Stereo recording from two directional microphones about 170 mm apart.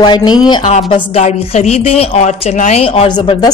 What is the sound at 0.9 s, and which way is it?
A woman's voice, 40° left (ahead or behind).